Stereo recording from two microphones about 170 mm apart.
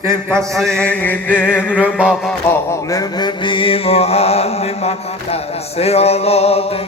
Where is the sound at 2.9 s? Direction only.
20° left (ahead or behind).